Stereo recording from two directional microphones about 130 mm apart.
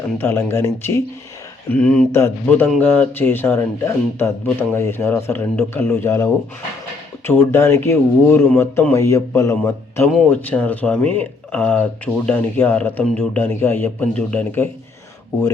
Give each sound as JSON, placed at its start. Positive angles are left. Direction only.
{"t": 0.2, "sound": "speech", "side_deg": 15}